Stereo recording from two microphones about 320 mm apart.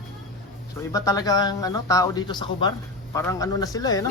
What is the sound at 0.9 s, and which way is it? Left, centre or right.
Speech, centre.